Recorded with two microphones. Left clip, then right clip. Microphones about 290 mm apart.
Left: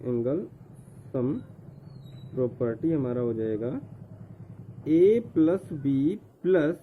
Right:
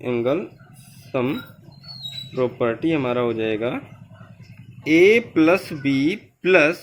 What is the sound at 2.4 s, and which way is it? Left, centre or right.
A man's voice, centre.